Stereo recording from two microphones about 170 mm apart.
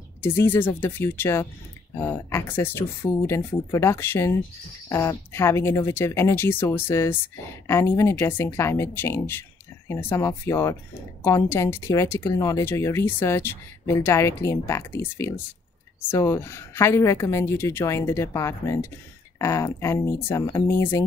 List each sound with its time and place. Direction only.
0.2 s speech: 15° left (ahead or behind)